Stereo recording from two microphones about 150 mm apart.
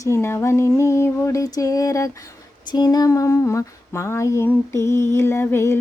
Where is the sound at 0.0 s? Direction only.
15° left (ahead or behind).